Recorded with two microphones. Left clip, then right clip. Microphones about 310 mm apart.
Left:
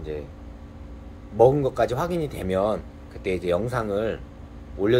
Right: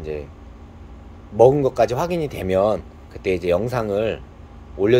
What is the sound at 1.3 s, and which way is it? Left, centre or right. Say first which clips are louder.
Speech: right 4 dB; right.